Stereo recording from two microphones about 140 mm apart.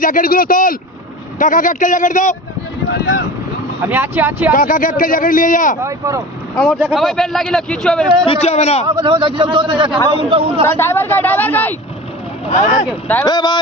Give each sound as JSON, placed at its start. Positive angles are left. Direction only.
{"t": 0.0, "sound": "speech", "side_deg": 80}
{"t": 1.4, "sound": "a man's voice", "side_deg": 70}
{"t": 3.8, "sound": "speech", "side_deg": -15}
{"t": 4.5, "sound": "a man's voice", "side_deg": 75}
{"t": 5.8, "sound": "speech", "side_deg": -20}
{"t": 6.6, "sound": "speech", "side_deg": -5}
{"t": 8.3, "sound": "a man's voice", "side_deg": 50}
{"t": 9.0, "sound": "a man's voice", "side_deg": -35}
{"t": 10.8, "sound": "a woman's voice", "side_deg": 15}
{"t": 12.5, "sound": "speech", "side_deg": 55}
{"t": 13.2, "sound": "speech", "side_deg": 30}